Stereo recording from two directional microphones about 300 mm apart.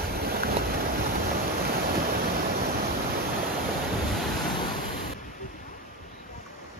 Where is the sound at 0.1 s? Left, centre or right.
Right.